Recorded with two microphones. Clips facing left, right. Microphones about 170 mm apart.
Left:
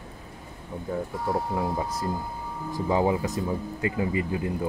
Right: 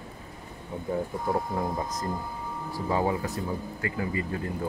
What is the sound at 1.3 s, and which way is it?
Speech, 10° left (ahead or behind).